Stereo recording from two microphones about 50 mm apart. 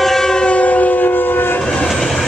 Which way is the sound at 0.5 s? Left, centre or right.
Left.